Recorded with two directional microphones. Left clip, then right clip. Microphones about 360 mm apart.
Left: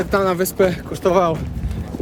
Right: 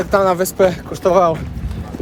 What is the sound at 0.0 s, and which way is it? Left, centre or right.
Speech, centre.